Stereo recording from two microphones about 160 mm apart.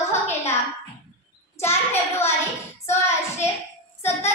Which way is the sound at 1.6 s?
15° left (ahead or behind).